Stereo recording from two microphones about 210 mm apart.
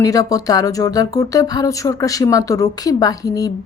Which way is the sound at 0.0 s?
15° left (ahead or behind).